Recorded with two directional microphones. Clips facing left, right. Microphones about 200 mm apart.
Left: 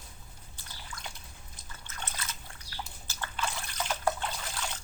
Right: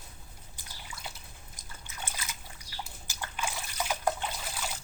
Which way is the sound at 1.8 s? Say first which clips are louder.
Even; 10° right (ahead or behind).